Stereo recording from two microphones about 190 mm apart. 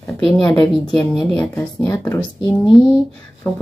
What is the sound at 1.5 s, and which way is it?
Speech, 10° left (ahead or behind).